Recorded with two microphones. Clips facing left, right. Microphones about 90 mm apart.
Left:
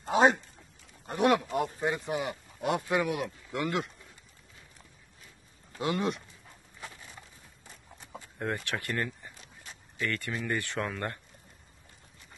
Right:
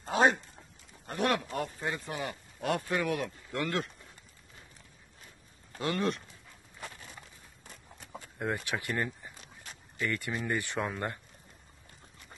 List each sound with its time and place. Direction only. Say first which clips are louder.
0.1 s a sound: left 2 dB; 20° left (ahead or behind)
1.0 s speech: left 5 dB; 15° left (ahead or behind)
5.8 s speech: left 1 dB; 10° left (ahead or behind)
8.5 s speech: even; 15° right (ahead or behind)